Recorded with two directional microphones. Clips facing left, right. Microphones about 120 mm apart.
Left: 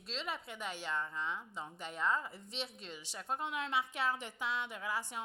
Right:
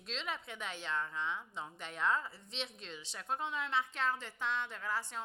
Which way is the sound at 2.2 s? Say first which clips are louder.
Even; 15° left (ahead or behind).